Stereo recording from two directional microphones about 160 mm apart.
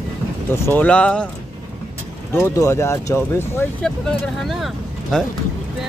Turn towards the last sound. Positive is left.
turn(degrees=0)  # may be behind; listen again after turning